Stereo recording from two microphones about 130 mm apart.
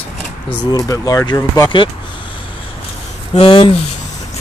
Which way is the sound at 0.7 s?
30° left (ahead or behind).